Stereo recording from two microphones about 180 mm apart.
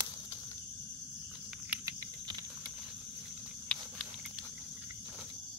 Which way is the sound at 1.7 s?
15° right (ahead or behind).